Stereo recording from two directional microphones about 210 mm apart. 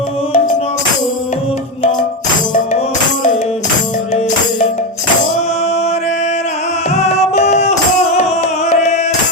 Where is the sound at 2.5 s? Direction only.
35° left (ahead or behind).